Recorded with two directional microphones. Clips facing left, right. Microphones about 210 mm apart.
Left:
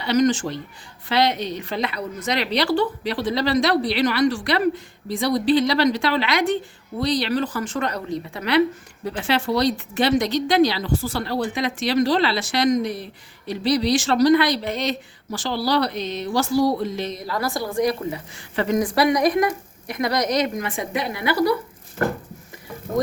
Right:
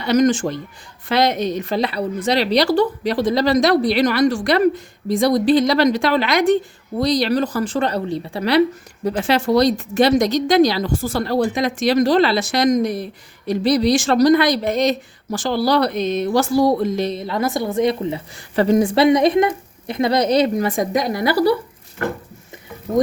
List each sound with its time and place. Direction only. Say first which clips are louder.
0.0 s a woman's voice: right 3 dB; 45° right (ahead or behind)
17.2 s a woman's voice: right 5 dB; 20° right (ahead or behind)